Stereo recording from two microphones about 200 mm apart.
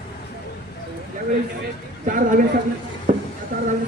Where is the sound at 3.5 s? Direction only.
45° right (ahead or behind).